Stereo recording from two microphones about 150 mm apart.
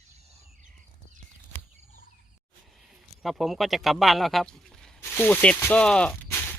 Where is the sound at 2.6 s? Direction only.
Centre (ahead or behind).